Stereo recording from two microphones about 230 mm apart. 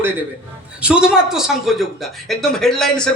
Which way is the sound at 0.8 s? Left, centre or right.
Centre.